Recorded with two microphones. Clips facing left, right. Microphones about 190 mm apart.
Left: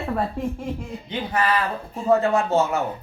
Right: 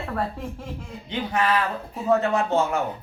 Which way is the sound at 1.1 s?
Centre (ahead or behind).